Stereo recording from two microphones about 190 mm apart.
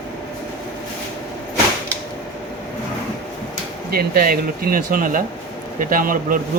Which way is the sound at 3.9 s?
50° right (ahead or behind).